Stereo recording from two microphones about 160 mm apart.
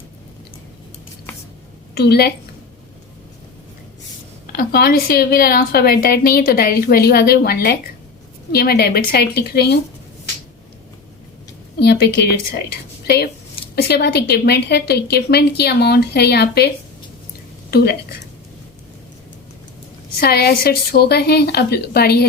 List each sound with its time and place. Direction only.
2.0 s a woman's voice: 90° left
4.5 s a woman's voice: 75° left (ahead or behind)
11.8 s a woman's voice: 90° left
17.7 s a woman's voice: 80° left
20.1 s a woman's voice: 80° left